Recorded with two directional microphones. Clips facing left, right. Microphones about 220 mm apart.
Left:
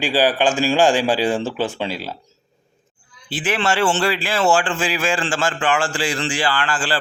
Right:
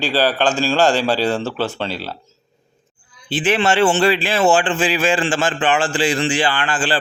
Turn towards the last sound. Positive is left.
turn(degrees=-20)  # may be behind; listen again after turning